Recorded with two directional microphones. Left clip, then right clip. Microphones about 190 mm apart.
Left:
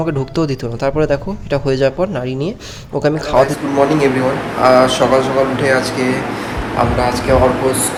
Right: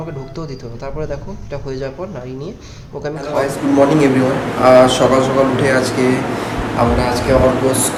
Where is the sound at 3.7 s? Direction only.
5° right (ahead or behind).